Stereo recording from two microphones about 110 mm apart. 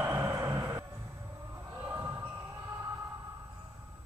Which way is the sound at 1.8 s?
20° right (ahead or behind).